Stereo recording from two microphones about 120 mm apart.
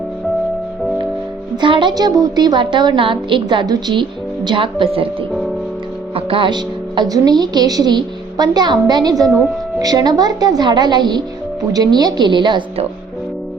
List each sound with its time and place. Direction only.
1.6 s speech: 40° right (ahead or behind)
6.1 s speech: 45° right (ahead or behind)